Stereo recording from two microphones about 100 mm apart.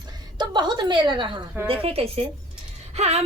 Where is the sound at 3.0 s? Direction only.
90° right.